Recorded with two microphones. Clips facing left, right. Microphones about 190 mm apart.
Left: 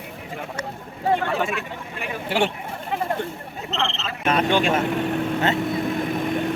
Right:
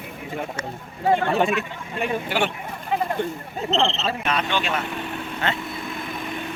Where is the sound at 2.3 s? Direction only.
30° left (ahead or behind).